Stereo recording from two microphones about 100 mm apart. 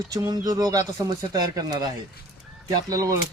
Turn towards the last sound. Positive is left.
turn(degrees=-35)  # may be behind; listen again after turning